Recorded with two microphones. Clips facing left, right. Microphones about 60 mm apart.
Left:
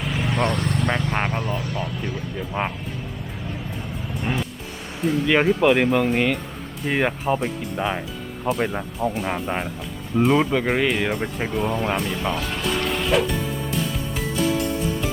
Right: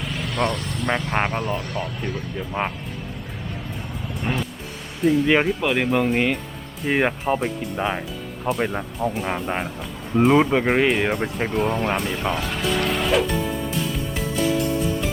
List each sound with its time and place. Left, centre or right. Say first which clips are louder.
0.0 s vehicle: left 3 dB; centre
0.5 s vehicle: left 4 dB; left
0.9 s speech: right 5 dB; centre
4.1 s music: even; centre
5.0 s speech: right 1 dB; centre